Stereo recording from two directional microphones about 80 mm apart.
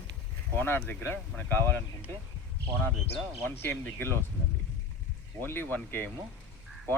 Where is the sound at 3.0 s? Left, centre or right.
Left.